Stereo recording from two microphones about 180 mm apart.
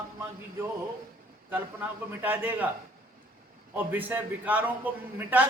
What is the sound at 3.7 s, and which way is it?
A man's voice, 10° right (ahead or behind).